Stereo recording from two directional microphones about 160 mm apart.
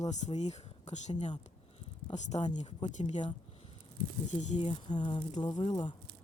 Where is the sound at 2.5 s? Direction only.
45° left (ahead or behind).